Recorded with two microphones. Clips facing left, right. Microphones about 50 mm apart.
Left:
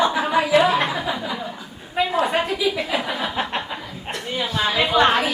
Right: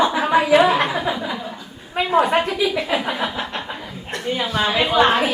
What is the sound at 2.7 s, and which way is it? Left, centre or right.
Speech, centre.